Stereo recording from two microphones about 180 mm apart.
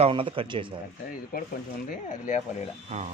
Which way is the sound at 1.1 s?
50° left (ahead or behind).